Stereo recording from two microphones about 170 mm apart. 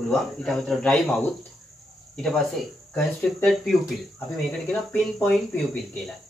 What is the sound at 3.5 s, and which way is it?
Speech, centre (ahead or behind).